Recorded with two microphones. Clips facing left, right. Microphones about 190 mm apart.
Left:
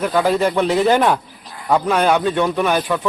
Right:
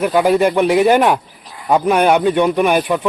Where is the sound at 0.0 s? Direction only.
15° right (ahead or behind).